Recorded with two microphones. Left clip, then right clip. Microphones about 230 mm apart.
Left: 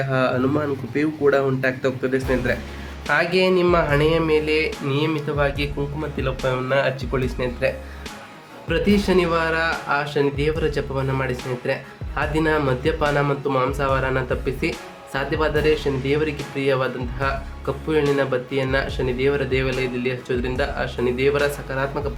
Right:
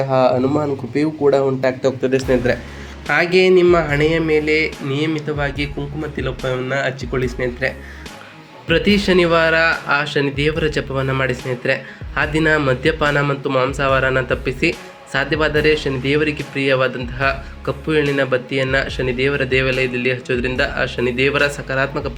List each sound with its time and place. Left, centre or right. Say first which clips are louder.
0.1 s speech: right 6 dB; centre
3.1 s speech: right 5 dB; centre